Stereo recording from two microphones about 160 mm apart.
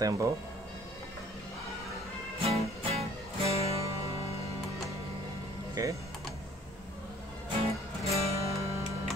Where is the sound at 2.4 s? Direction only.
40° right (ahead or behind).